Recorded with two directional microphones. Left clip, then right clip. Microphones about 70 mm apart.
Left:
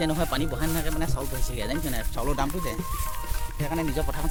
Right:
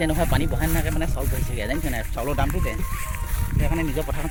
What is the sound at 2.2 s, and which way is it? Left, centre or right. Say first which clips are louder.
Speech: right 2 dB; left.